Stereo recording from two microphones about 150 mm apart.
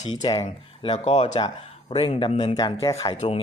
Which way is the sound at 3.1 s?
50° left (ahead or behind).